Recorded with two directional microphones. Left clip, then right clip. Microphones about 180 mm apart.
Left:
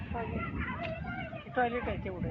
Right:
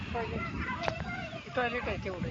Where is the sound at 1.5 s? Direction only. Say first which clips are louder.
Left 1 dB; 60° left (ahead or behind).